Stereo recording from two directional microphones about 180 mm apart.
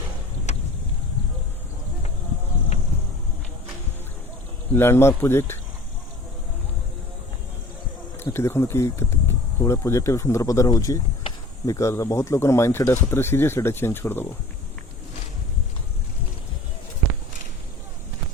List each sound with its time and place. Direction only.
0.5 s vehicle: 40° left (ahead or behind)
4.7 s speech: 15° left (ahead or behind)
8.2 s speech: 15° left (ahead or behind)